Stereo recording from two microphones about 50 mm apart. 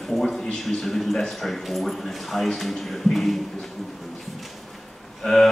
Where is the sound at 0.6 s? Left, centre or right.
Centre.